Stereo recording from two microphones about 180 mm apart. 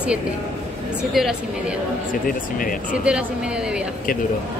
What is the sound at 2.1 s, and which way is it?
Speech, 50° left (ahead or behind).